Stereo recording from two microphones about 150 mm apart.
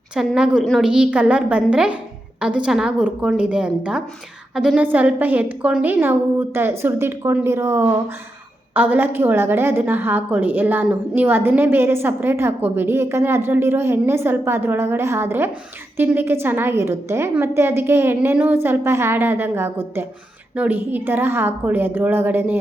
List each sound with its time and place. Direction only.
0.1 s a woman's voice: 5° right (ahead or behind)